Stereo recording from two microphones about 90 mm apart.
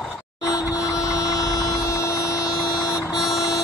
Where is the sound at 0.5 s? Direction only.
40° left (ahead or behind).